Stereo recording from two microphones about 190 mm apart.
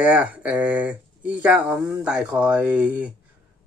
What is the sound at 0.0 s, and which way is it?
Speech, 10° right (ahead or behind).